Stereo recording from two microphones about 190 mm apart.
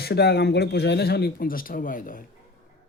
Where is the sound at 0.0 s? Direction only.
55° left (ahead or behind).